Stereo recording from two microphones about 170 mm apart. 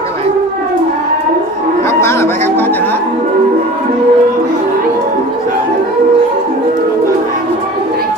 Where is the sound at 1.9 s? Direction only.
15° left (ahead or behind).